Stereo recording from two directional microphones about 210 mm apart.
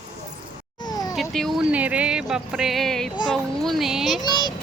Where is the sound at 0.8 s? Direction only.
20° left (ahead or behind).